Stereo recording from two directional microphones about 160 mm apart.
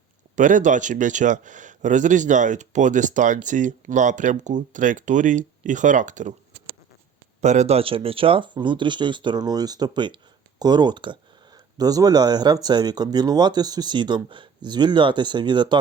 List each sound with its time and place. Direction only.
0.3 s speech: 50° right (ahead or behind)
7.4 s speech: 45° right (ahead or behind); by 15.8 s 30° right (ahead or behind)